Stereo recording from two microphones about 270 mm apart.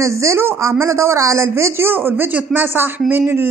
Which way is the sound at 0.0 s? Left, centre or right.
Centre.